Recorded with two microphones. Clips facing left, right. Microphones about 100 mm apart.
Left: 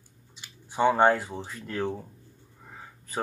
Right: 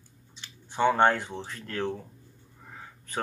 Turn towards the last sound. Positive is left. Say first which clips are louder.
# even
turn(degrees=5)  # may be behind; listen again after turning